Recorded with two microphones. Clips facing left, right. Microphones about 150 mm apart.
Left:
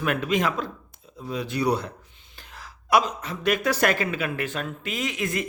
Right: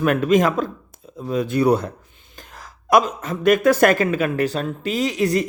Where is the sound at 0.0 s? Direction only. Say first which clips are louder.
Right 8 dB; 45° right (ahead or behind).